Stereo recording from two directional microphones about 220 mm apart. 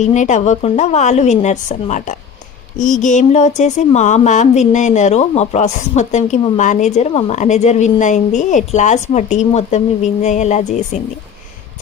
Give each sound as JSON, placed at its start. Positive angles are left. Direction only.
{"t": 0.0, "sound": "speech", "side_deg": 35}